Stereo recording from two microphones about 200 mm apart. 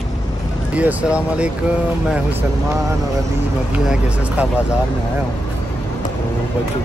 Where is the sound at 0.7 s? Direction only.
5° right (ahead or behind).